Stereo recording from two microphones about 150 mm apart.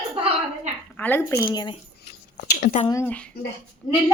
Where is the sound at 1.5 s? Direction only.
30° left (ahead or behind).